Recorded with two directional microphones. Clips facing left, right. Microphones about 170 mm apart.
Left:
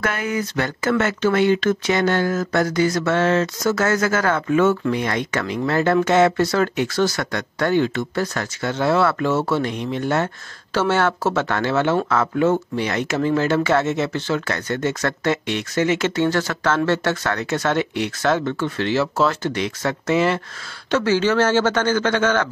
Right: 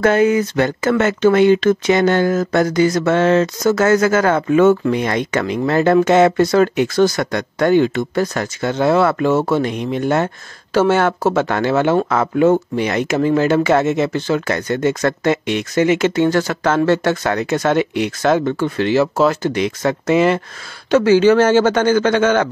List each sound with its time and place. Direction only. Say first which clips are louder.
0.0 s speech: right 10 dB; 25° right (ahead or behind)